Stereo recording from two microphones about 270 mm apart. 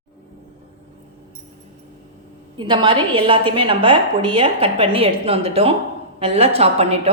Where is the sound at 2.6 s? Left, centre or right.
Centre.